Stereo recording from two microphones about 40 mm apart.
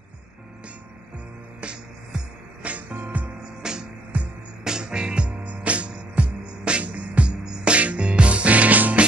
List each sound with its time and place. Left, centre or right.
1.6 s music: right
2.9 s music: right
3.6 s music: centre
4.1 s music: right
4.6 s music: centre
7.4 s music: centre
7.7 s music: right